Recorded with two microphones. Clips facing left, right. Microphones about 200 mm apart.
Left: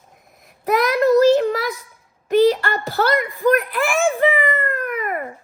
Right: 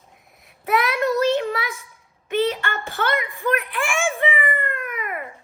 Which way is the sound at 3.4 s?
40° left (ahead or behind).